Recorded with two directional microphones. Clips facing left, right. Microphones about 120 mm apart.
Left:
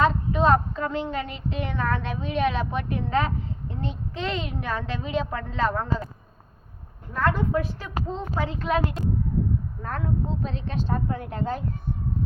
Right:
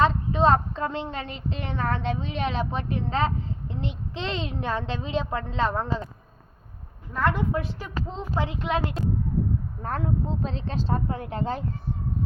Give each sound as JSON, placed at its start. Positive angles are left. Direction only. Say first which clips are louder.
{"t": 0.0, "sound": "a child's voice", "louder": "even", "side_deg": -30}
{"t": 7.1, "sound": "a child's voice", "louder": "left 1 dB", "side_deg": -20}
{"t": 9.8, "sound": "a child's voice", "louder": "right 2 dB", "side_deg": -30}